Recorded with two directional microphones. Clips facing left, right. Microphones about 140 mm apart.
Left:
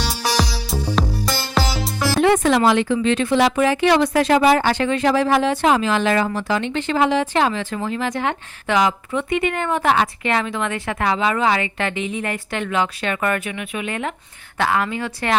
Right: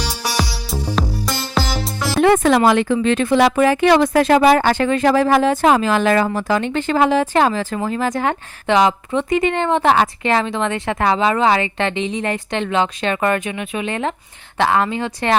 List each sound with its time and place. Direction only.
0.0 s music: centre (ahead or behind)
2.2 s music: 50° right (ahead or behind)
2.6 s speech: 50° right (ahead or behind)
8.6 s speech: 30° right (ahead or behind)